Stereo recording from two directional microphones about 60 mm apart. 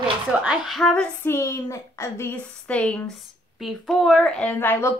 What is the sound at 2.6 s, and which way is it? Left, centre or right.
Speech, left.